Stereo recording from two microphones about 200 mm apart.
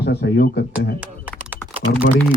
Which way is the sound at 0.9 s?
5° right (ahead or behind).